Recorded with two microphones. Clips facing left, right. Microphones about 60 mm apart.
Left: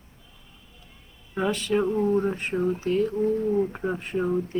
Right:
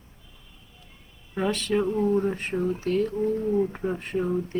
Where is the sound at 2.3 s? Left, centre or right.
Centre.